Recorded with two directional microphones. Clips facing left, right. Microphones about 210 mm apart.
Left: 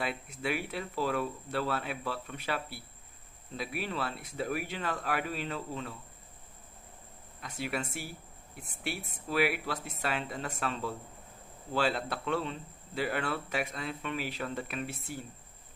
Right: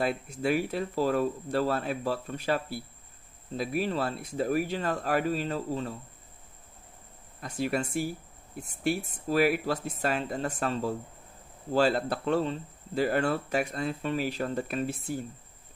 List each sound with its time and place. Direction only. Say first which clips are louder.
0.0 s speech: right 6 dB; 40° right (ahead or behind)
7.5 s speech: right 7 dB; 40° right (ahead or behind)